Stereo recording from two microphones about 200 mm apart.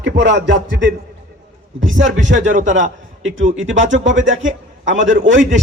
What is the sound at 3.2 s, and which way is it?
A man's voice, 75° right (ahead or behind).